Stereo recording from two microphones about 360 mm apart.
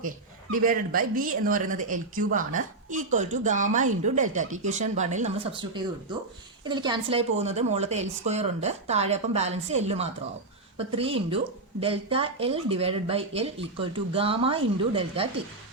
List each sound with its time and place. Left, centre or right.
0.5 s speech: right